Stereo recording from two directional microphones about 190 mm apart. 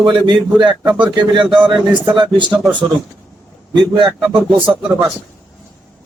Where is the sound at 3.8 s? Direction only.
25° right (ahead or behind).